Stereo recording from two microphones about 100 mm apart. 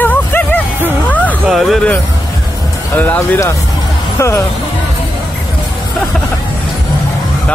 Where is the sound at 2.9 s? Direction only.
15° left (ahead or behind).